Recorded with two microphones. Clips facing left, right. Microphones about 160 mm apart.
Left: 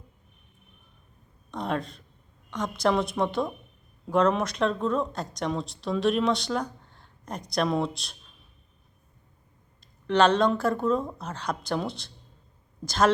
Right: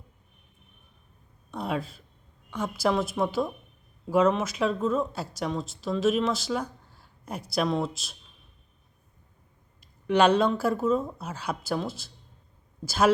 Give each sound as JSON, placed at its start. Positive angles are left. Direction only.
{"t": 1.5, "sound": "speech", "side_deg": -5}
{"t": 10.1, "sound": "a woman's voice", "side_deg": -10}